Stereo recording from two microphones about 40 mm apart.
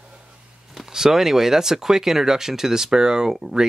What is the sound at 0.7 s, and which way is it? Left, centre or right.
Speech, centre.